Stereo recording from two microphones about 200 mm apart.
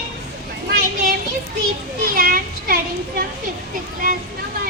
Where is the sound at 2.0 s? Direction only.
45° right (ahead or behind).